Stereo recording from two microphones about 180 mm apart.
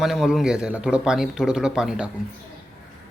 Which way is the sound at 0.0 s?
Centre (ahead or behind).